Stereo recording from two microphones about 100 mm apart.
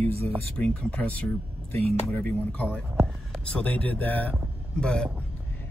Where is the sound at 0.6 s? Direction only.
10° left (ahead or behind).